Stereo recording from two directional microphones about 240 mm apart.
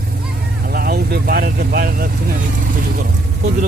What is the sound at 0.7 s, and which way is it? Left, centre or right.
Vehicle, right.